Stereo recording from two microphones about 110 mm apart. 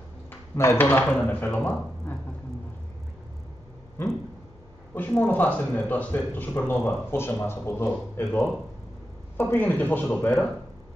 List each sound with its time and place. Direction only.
0.6 s speech: 20° left (ahead or behind)
4.9 s a man's voice: 15° left (ahead or behind)